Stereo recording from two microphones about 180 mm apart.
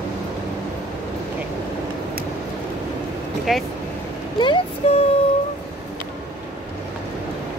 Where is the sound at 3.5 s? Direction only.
Centre (ahead or behind).